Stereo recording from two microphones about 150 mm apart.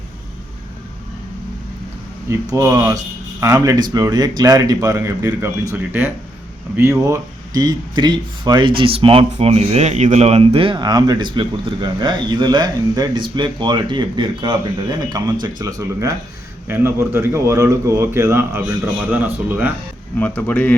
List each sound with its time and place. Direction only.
2.3 s a man's voice: 20° right (ahead or behind)
20.1 s speech: 10° left (ahead or behind)